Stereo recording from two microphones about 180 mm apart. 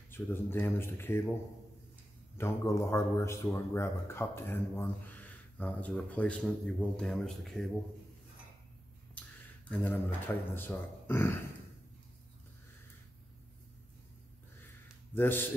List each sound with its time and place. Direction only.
0.1 s speech: 10° left (ahead or behind)
2.3 s speech: 15° left (ahead or behind)
9.7 s speech: 10° left (ahead or behind)
15.1 s speech: 10° left (ahead or behind)